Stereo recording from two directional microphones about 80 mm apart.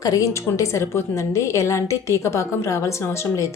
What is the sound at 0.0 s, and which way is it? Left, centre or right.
A woman's voice, left.